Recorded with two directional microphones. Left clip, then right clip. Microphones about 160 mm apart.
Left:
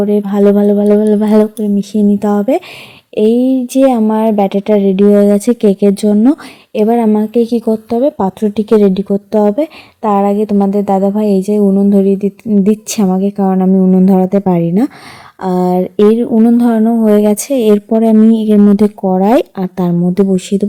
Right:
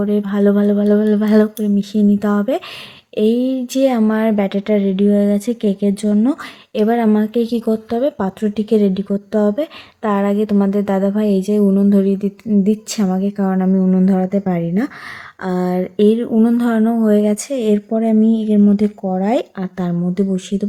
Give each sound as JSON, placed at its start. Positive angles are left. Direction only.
{"t": 0.0, "sound": "speech", "side_deg": 35}
{"t": 17.1, "sound": "speech", "side_deg": 40}